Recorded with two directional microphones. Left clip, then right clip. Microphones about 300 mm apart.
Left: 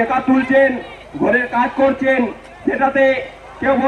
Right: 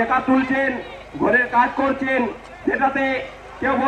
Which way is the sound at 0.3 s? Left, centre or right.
Centre.